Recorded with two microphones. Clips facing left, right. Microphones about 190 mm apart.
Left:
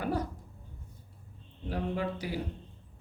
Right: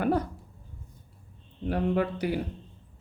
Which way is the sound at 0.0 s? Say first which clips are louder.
Right 6 dB; 60° right (ahead or behind).